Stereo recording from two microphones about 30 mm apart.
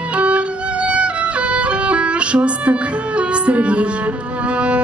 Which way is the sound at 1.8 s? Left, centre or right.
Right.